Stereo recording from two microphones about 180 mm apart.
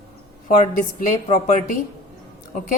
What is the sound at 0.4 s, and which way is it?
A woman's voice, 45° left (ahead or behind).